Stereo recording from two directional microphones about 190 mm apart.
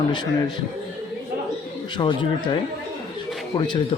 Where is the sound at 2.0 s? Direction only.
25° left (ahead or behind).